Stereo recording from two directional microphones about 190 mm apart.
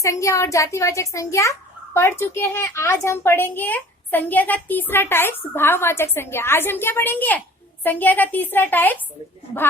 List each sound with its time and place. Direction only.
0.0 s a child's voice: 15° left (ahead or behind)